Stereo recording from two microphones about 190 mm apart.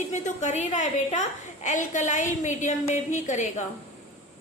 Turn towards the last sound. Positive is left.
turn(degrees=40)  # may be behind; listen again after turning